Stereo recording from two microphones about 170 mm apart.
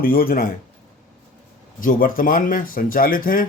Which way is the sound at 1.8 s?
55° left (ahead or behind).